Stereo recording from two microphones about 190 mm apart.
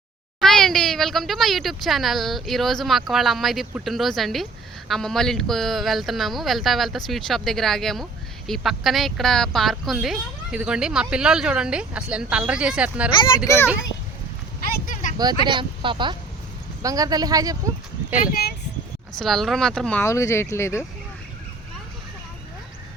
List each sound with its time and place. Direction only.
0.3 s speech: centre (ahead or behind)
13.1 s a child's voice: 25° left (ahead or behind)
14.6 s a sound: 45° left (ahead or behind)
15.4 s speech: 25° right (ahead or behind)
19.2 s speech: centre (ahead or behind)